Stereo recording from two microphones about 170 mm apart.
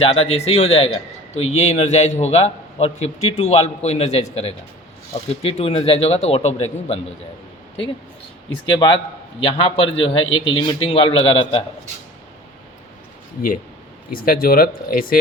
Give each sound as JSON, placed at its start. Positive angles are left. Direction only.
{"t": 0.0, "sound": "a man's voice", "side_deg": 35}
{"t": 8.6, "sound": "a man's voice", "side_deg": 25}
{"t": 14.1, "sound": "speech", "side_deg": 60}